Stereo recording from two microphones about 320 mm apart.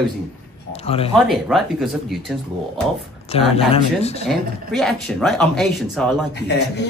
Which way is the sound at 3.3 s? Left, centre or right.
Centre.